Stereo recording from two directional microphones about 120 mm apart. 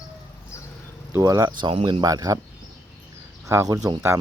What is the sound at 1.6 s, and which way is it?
Speech, 40° right (ahead or behind).